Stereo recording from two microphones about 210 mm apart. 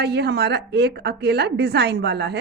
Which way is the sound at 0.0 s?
50° right (ahead or behind).